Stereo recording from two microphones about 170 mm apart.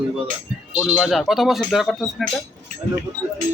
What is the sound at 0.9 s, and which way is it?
Speech, centre (ahead or behind).